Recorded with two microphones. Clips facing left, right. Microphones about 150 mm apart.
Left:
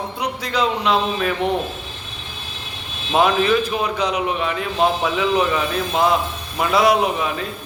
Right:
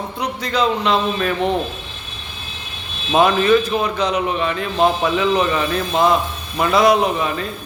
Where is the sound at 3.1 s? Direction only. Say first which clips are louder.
Right 3 dB; 5° left (ahead or behind).